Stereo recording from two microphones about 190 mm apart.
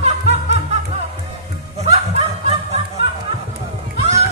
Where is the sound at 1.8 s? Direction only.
35° right (ahead or behind).